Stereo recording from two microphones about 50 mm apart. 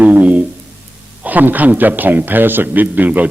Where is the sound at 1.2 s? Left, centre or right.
Right.